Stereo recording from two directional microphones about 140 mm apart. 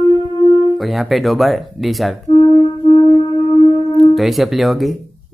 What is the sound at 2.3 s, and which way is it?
Wind instrument, 35° left (ahead or behind).